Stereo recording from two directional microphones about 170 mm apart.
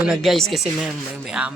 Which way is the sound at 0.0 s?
Centre (ahead or behind).